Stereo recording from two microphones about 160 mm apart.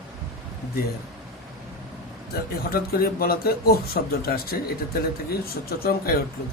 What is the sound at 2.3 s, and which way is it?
Speech, 70° left (ahead or behind).